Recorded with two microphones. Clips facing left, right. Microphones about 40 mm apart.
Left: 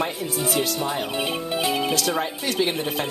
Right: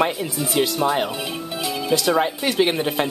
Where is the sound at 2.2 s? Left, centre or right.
Right.